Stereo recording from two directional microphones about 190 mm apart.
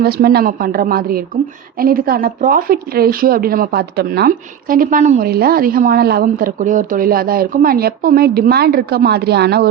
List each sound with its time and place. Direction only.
0.0 s speech: 55° right (ahead or behind)